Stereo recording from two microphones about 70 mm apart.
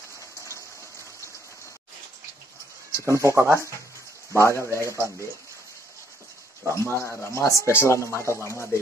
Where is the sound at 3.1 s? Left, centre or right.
Right.